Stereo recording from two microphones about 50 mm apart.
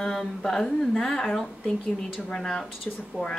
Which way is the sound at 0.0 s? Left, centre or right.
Centre.